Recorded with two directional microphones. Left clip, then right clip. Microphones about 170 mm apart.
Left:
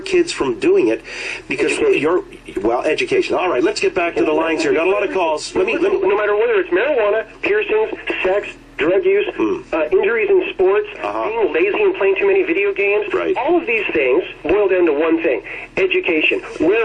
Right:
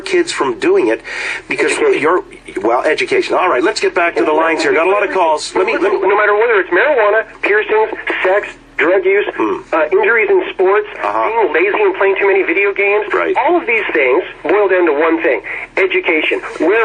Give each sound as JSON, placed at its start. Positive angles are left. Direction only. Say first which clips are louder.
{"t": 0.1, "sound": "speech", "louder": "right 3 dB", "side_deg": -20}